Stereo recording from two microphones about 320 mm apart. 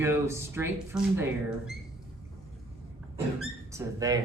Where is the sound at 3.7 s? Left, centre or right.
Centre.